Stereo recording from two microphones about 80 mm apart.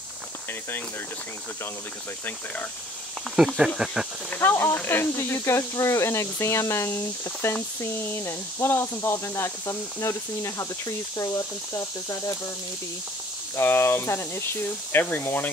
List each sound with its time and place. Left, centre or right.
3.3 s speech: centre
4.4 s speech: left
13.6 s speech: left